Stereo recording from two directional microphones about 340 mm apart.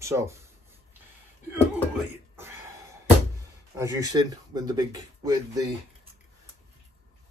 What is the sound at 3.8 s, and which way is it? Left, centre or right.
Speech, centre.